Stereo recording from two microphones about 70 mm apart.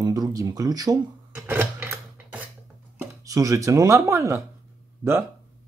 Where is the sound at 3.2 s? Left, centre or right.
Right.